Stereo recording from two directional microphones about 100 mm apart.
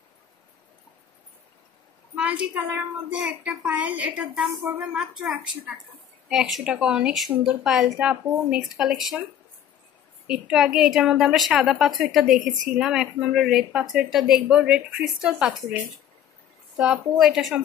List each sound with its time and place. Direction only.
2.1 s a sound: 15° right (ahead or behind)
3.1 s a woman's voice: 10° right (ahead or behind)
4.9 s a woman's voice: 5° right (ahead or behind)
10.2 s a woman's voice: 5° right (ahead or behind)
16.7 s a woman's voice: 5° right (ahead or behind)